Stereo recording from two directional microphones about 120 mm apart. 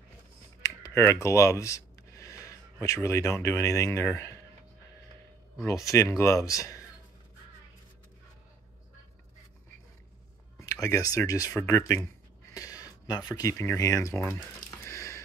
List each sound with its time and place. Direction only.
0.6 s speech: 25° left (ahead or behind)
5.7 s speech: 25° left (ahead or behind)
10.6 s speech: 30° left (ahead or behind)
12.5 s a sound: 30° left (ahead or behind)
13.7 s speech: 25° left (ahead or behind)
14.7 s a sound: 25° left (ahead or behind)